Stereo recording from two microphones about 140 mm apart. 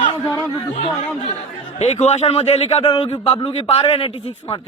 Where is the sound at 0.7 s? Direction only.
60° left (ahead or behind).